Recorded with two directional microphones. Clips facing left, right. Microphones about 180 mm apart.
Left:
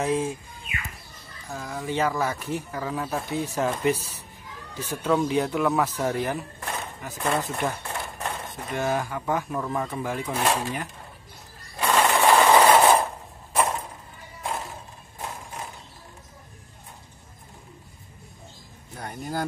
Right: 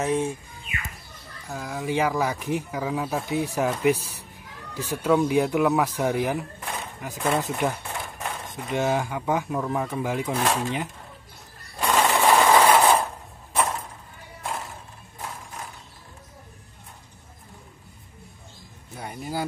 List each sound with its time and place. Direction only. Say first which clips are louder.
0.0 s speech: right 1 dB; 5° left (ahead or behind)
1.5 s speech: right 2 dB; 5° right (ahead or behind)
7.2 s a sound: right 2 dB; 15° right (ahead or behind)
8.6 s speech: right 2 dB; 20° right (ahead or behind)
10.4 s speech: left 2 dB; centre (ahead or behind)
11.8 s coin: even; centre (ahead or behind)
12.4 s a sound: left 1 dB; 5° left (ahead or behind)
13.6 s chop: left 1 dB; 10° left (ahead or behind)
18.9 s a sound: even; 5° right (ahead or behind)